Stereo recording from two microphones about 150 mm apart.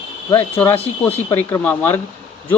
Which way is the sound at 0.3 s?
15° left (ahead or behind).